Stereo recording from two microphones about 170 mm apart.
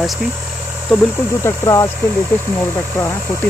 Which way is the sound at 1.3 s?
15° left (ahead or behind).